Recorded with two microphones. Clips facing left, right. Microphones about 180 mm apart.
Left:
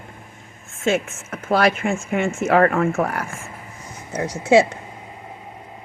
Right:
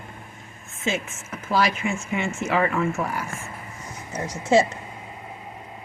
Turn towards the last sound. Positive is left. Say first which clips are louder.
# left 4 dB
turn(degrees=70)  # may be behind; listen again after turning